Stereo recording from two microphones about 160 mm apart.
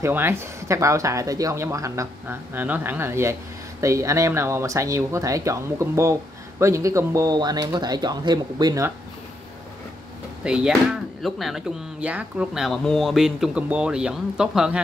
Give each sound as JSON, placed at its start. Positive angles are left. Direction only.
{"t": 0.0, "sound": "speech", "side_deg": -15}
{"t": 10.4, "sound": "speech", "side_deg": -5}